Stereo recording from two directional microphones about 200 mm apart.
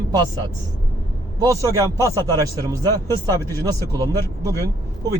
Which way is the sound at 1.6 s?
15° right (ahead or behind).